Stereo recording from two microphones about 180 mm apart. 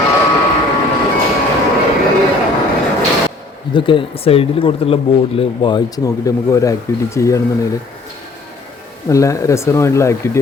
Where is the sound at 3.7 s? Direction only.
25° left (ahead or behind).